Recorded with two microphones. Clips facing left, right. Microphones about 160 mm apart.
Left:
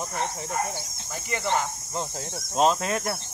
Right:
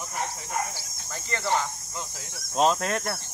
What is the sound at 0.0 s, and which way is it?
Speech, 20° left (ahead or behind).